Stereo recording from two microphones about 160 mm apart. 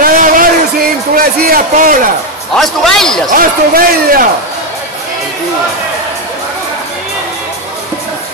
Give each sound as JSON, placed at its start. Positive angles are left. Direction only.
{"t": 0.0, "sound": "a sound", "side_deg": -55}
{"t": 2.5, "sound": "a man's voice", "side_deg": 0}
{"t": 3.3, "sound": "speech", "side_deg": -65}